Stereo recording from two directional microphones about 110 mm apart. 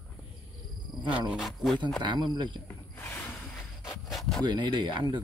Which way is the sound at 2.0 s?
40° right (ahead or behind).